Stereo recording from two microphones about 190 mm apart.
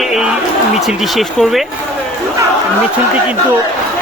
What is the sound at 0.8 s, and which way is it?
Speech, centre (ahead or behind).